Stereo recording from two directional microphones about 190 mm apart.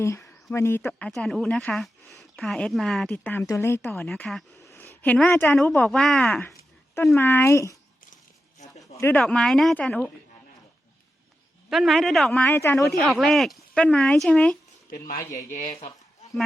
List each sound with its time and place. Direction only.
0.0 s speech: 15° left (ahead or behind)
4.0 s speech: centre (ahead or behind)
4.5 s a sound: 15° left (ahead or behind)
5.0 s a woman's voice: 10° left (ahead or behind)
9.0 s speech: 10° left (ahead or behind)
11.7 s speech: centre (ahead or behind)
12.9 s speech: centre (ahead or behind)
14.8 s speech: 50° left (ahead or behind)